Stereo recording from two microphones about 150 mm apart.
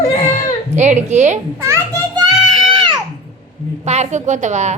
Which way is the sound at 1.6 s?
20° right (ahead or behind).